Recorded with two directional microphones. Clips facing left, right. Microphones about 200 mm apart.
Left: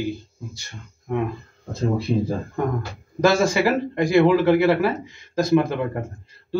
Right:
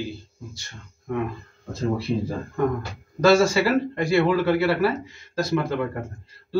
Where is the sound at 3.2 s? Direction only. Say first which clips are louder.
Right 1 dB; 15° left (ahead or behind).